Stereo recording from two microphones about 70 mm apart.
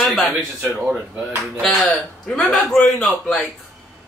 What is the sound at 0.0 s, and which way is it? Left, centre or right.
A man's voice, centre.